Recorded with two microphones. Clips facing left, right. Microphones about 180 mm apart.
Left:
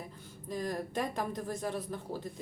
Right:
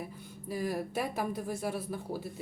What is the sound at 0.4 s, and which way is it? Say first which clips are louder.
A woman's voice: right 2 dB; 10° right (ahead or behind).